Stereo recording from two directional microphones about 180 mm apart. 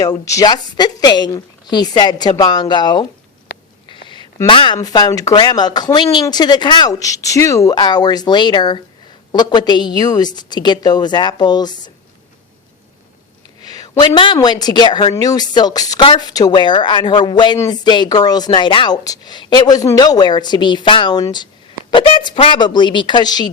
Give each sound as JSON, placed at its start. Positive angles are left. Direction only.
{"t": 0.0, "sound": "a woman's voice", "side_deg": 20}
{"t": 13.6, "sound": "a sound", "side_deg": 20}
{"t": 14.1, "sound": "a woman's voice", "side_deg": 30}